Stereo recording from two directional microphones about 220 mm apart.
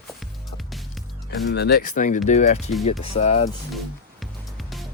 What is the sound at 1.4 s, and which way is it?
Speech, 50° left (ahead or behind).